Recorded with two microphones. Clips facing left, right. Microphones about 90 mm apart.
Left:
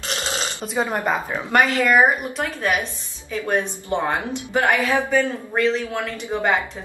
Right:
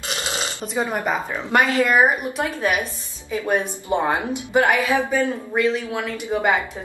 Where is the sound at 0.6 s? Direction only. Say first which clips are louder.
Left 1 dB; 15° left (ahead or behind).